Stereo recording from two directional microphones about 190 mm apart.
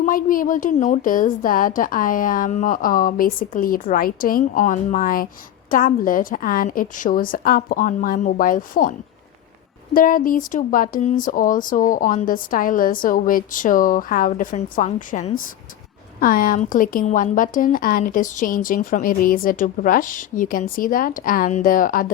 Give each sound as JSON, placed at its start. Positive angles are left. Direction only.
{"t": 0.0, "sound": "a woman's voice", "side_deg": 45}